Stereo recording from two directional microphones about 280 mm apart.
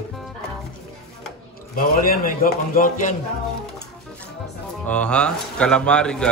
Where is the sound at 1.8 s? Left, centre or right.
Left.